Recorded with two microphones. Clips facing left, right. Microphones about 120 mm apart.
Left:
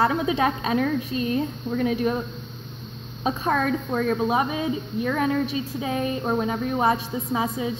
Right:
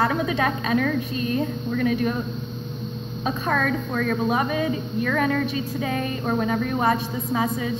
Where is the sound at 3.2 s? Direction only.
25° left (ahead or behind).